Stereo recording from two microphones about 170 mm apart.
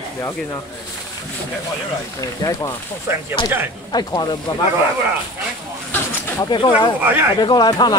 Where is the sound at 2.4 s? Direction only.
25° left (ahead or behind).